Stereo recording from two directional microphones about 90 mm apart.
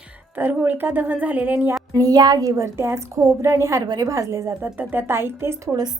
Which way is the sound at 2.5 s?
30° right (ahead or behind).